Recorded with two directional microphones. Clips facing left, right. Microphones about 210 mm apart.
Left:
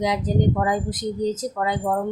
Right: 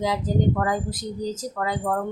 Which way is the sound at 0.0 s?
20° left (ahead or behind).